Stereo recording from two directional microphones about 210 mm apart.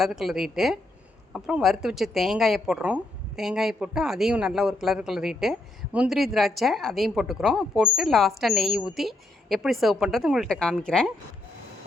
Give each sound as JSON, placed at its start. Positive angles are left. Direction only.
{"t": 0.0, "sound": "speech", "side_deg": 0}